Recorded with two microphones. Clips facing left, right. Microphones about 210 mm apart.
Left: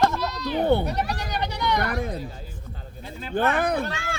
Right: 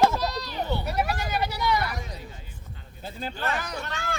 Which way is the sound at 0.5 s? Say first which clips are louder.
Left 9 dB; 55° left (ahead or behind).